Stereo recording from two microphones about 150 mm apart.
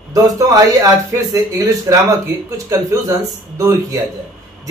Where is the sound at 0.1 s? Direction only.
25° right (ahead or behind).